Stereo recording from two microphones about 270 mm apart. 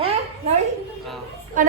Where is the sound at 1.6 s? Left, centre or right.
Right.